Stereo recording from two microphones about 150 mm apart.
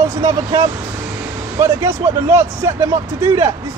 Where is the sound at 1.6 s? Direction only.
15° right (ahead or behind).